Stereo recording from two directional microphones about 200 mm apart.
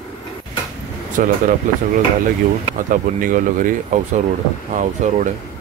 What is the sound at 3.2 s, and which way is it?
Speech, 40° right (ahead or behind).